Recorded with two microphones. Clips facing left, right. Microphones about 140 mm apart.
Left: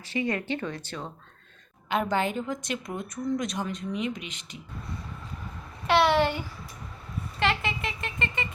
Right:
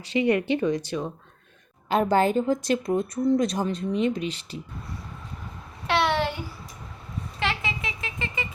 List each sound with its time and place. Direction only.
0.0 s speech: 15° right (ahead or behind)
1.9 s a woman's voice: 35° right (ahead or behind)
5.9 s speech: centre (ahead or behind)